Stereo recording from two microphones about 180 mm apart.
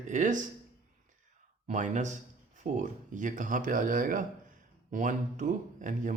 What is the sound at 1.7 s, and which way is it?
Speech, 45° right (ahead or behind).